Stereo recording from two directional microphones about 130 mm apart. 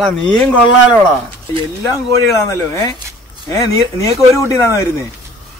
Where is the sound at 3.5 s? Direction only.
25° left (ahead or behind).